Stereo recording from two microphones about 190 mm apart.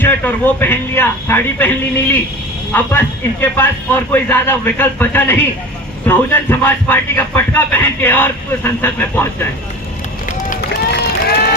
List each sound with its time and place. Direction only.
0.0 s speech: 10° left (ahead or behind)
2.7 s speech: 10° left (ahead or behind)
10.6 s run: 55° left (ahead or behind)